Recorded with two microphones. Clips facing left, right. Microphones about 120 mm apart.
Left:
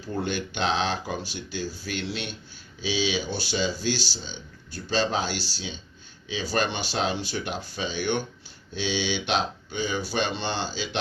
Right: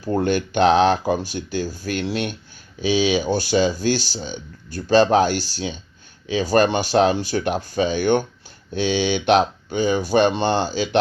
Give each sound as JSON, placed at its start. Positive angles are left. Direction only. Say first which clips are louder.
{"t": 0.0, "sound": "speech", "louder": "right 9 dB", "side_deg": -50}